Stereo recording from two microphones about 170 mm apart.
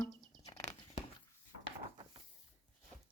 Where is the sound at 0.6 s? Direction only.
40° left (ahead or behind).